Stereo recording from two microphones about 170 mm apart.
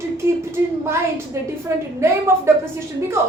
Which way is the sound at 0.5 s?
15° right (ahead or behind).